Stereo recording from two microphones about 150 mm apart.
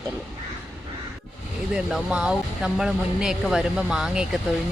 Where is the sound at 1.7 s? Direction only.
5° right (ahead or behind).